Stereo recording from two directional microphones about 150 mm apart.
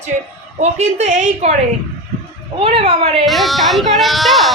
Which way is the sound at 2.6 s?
45° right (ahead or behind).